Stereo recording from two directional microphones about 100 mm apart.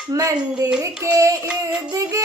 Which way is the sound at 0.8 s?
30° right (ahead or behind).